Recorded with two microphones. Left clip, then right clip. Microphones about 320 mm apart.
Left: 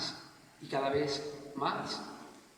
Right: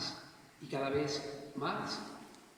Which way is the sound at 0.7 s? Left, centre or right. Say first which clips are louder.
Left 3 dB; left.